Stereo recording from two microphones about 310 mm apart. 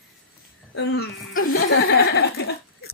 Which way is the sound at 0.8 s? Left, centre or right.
Left.